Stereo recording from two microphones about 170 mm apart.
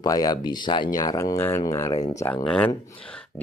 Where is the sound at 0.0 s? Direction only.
20° left (ahead or behind).